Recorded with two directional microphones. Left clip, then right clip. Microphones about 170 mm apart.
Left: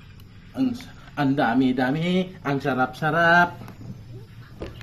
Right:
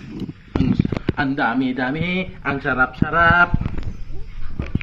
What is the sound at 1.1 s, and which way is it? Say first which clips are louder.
Speech: even; 55° left (ahead or behind).